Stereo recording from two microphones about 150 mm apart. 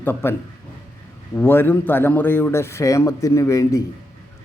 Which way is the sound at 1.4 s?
15° left (ahead or behind).